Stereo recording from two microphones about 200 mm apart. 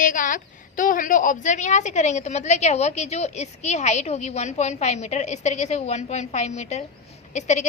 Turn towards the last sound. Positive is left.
turn(degrees=35)  # may be behind; listen again after turning